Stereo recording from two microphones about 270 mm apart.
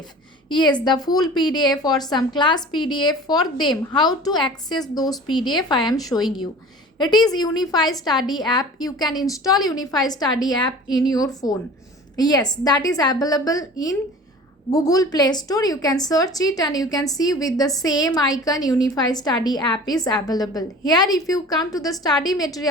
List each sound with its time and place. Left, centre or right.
0.4 s a woman's voice: centre